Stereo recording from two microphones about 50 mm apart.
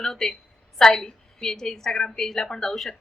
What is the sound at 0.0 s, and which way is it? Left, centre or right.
A woman's voice, centre.